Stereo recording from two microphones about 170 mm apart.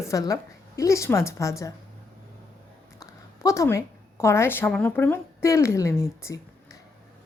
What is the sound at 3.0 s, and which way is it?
A woman's voice, 20° left (ahead or behind).